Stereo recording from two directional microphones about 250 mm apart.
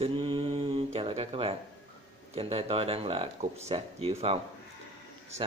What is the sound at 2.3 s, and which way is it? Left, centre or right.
Speech, right.